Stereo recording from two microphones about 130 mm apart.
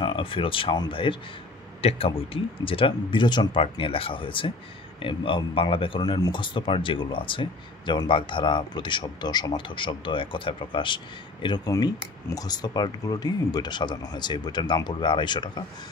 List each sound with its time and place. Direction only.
0.0 s speech: 40° left (ahead or behind)
11.7 s speech: 25° left (ahead or behind)